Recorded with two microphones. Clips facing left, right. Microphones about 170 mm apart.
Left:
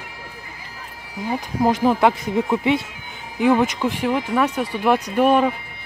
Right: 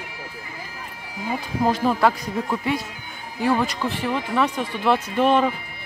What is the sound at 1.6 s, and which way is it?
Speech, 20° left (ahead or behind).